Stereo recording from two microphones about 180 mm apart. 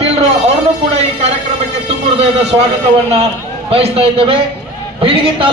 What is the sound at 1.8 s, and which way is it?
Speech, 35° right (ahead or behind).